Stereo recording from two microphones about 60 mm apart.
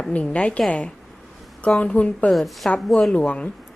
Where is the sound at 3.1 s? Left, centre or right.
Centre.